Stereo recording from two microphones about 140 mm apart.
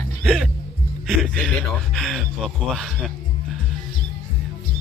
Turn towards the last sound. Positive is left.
turn(degrees=0)  # may be behind; listen again after turning